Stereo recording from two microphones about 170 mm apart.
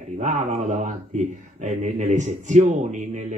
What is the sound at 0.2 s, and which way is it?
A man's voice, 45° right (ahead or behind).